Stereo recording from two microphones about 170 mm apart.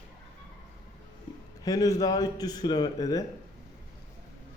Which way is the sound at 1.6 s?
20° left (ahead or behind).